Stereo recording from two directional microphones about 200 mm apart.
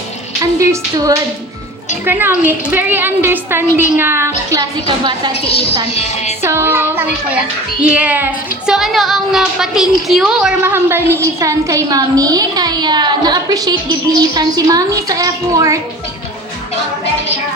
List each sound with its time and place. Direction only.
0.6 s speech: 15° right (ahead or behind)
6.0 s speech: 35° left (ahead or behind)
6.4 s speech: 10° right (ahead or behind)